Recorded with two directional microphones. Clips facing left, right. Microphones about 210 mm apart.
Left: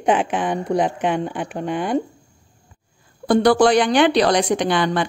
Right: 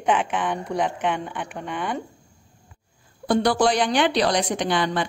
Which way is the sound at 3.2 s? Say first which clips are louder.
Left 5 dB; 60° left (ahead or behind).